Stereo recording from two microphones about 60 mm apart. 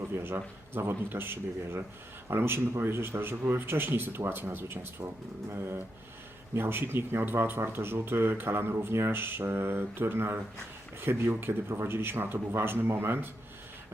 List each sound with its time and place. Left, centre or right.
0.1 s speech: right